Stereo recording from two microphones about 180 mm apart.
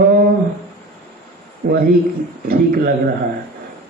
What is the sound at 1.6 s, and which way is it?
A man's voice, 55° right (ahead or behind).